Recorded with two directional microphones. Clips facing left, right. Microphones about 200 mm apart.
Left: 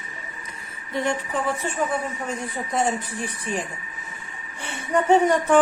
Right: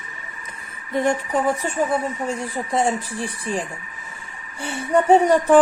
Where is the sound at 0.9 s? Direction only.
45° right (ahead or behind).